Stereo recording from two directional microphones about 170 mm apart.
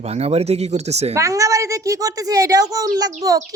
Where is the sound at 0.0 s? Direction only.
40° right (ahead or behind).